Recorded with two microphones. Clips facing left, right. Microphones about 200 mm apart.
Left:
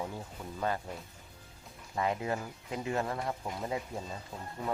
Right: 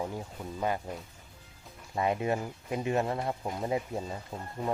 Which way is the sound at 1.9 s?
20° right (ahead or behind).